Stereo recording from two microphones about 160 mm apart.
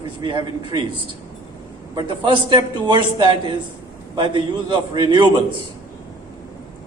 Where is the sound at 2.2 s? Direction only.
30° right (ahead or behind).